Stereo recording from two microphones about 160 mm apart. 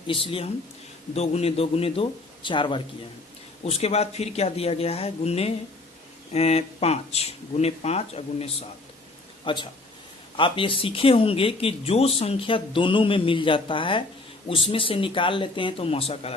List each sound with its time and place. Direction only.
0.1 s speech: 35° left (ahead or behind)